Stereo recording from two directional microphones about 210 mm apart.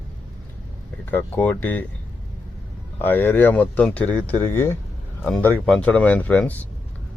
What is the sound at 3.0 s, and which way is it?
Speech, 10° left (ahead or behind).